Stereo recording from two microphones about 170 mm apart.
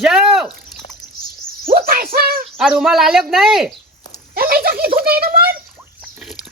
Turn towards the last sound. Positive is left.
turn(degrees=-60)  # may be behind; listen again after turning